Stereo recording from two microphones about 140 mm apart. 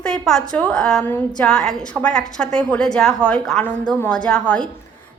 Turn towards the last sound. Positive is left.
turn(degrees=5)  # may be behind; listen again after turning